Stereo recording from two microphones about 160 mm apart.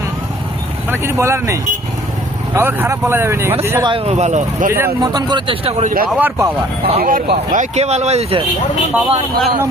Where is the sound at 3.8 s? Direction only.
35° right (ahead or behind).